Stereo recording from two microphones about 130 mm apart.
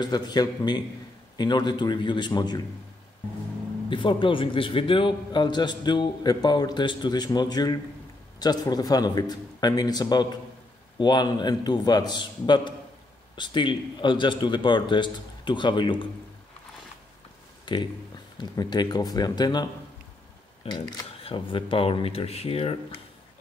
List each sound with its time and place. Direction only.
0.0 s a man's voice: 30° left (ahead or behind)
3.9 s a man's voice: 40° left (ahead or behind)
17.7 s a man's voice: 35° left (ahead or behind)
20.6 s speech: 50° left (ahead or behind)